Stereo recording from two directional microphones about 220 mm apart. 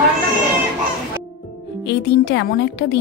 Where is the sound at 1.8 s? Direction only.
50° left (ahead or behind).